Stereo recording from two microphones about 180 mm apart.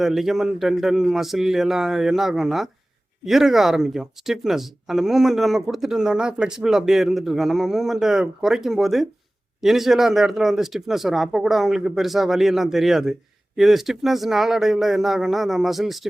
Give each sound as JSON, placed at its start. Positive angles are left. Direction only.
{"t": 0.0, "sound": "speech", "side_deg": 0}